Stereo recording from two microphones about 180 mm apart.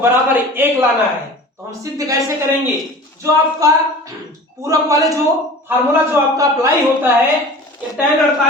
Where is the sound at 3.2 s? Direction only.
20° right (ahead or behind).